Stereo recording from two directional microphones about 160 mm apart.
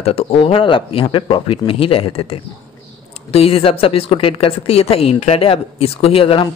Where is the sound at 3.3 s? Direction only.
35° left (ahead or behind).